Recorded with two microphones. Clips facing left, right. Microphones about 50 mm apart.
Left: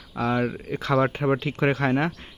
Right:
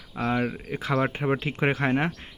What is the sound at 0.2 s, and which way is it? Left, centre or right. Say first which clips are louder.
Speech: left 2 dB; centre.